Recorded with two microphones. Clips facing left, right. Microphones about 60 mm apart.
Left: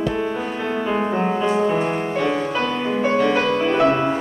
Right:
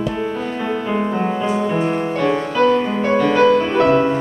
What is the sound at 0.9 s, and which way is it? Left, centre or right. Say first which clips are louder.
Music: even; centre.